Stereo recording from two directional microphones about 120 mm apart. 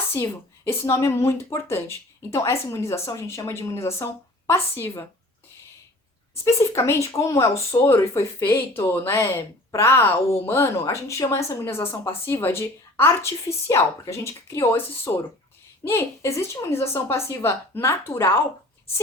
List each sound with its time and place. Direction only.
0.1 s speech: 20° left (ahead or behind)
6.4 s speech: 25° left (ahead or behind)